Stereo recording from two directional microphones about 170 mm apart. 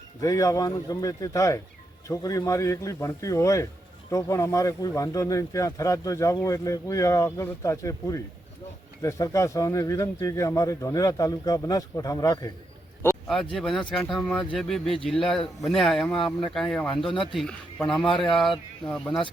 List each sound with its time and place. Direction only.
0.2 s a man's voice: 20° left (ahead or behind)
13.2 s speech: centre (ahead or behind)